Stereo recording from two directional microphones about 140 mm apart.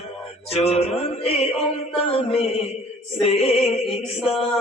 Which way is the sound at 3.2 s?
40° left (ahead or behind).